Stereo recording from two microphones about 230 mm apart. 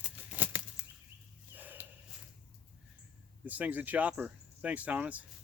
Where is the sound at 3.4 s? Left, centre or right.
Centre.